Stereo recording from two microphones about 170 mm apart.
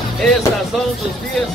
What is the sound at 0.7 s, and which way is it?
Speech, centre (ahead or behind).